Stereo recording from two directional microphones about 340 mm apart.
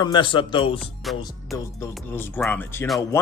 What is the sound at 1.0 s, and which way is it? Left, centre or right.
Speech, centre.